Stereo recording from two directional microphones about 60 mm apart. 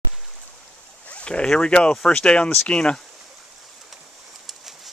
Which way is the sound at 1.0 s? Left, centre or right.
Centre.